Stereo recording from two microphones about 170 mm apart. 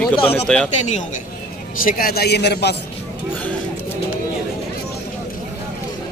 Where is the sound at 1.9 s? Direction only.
60° left (ahead or behind); by 2.8 s 80° left.